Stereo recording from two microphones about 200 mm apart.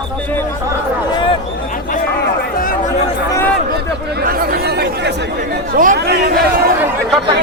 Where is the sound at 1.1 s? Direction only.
25° left (ahead or behind).